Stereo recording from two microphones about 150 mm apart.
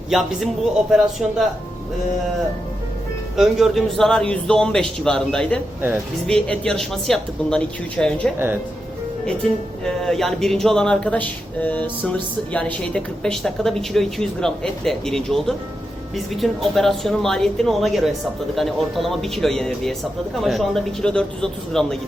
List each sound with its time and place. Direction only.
0.1 s speech: centre (ahead or behind)
3.3 s speech: centre (ahead or behind)
9.8 s speech: 5° left (ahead or behind)